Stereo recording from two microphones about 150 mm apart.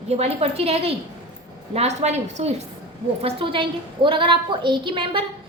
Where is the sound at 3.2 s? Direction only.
35° right (ahead or behind).